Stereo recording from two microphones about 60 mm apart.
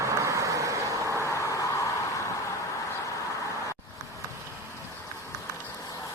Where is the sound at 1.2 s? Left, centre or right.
Left.